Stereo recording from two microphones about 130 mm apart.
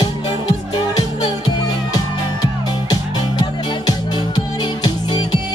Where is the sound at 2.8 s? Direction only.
30° left (ahead or behind).